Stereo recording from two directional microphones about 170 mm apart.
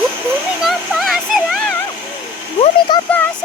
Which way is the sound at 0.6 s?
Centre (ahead or behind).